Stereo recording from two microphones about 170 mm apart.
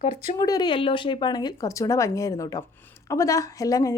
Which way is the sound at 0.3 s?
20° left (ahead or behind).